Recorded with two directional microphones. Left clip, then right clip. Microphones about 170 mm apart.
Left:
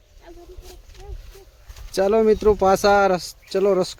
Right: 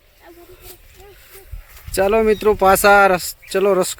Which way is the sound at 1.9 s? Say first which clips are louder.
Right 2 dB; 10° left (ahead or behind).